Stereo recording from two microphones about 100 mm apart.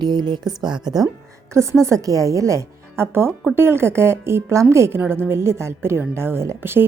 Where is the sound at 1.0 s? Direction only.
30° right (ahead or behind).